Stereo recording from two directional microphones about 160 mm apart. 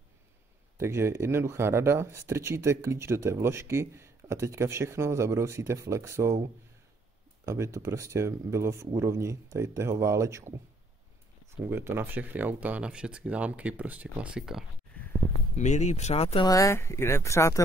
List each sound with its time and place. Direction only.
0.7 s speech: 15° right (ahead or behind)
7.4 s speech: 20° right (ahead or behind)
11.5 s speech: 15° right (ahead or behind)
15.5 s speech: 45° left (ahead or behind)
16.4 s speech: 20° left (ahead or behind)